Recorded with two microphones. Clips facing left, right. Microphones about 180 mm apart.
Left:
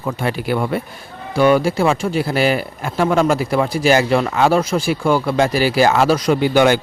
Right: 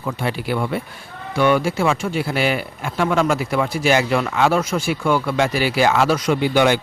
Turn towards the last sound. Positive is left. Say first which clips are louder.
# left 3 dB
turn(degrees=45)  # may be behind; listen again after turning